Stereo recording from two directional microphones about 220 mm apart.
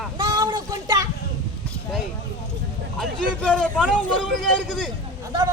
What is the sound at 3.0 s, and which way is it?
Speech, 5° left (ahead or behind).